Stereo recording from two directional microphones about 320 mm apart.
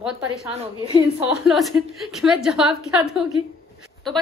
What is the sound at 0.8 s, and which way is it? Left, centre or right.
Speech, centre.